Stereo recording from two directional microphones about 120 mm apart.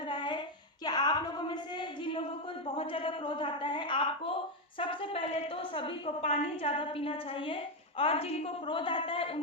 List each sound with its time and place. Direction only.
0.1 s child singing: 40° left (ahead or behind)
0.9 s a sound: 35° left (ahead or behind)
2.7 s a woman's voice: 50° left (ahead or behind)